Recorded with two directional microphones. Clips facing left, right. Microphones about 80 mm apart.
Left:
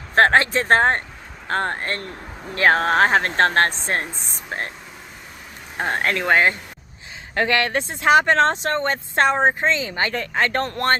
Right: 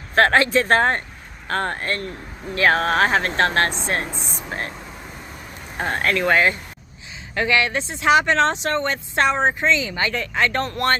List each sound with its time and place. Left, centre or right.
0.1 s speech: left
5.7 s speech: left
7.3 s speech: left